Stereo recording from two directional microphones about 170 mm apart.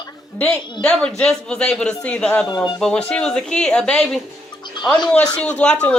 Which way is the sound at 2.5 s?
20° left (ahead or behind).